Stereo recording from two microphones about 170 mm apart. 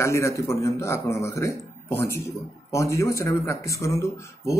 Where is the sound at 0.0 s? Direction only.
15° left (ahead or behind).